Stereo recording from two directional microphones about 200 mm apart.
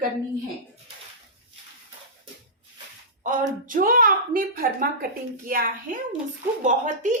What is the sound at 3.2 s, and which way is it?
A woman's voice, 40° right (ahead or behind).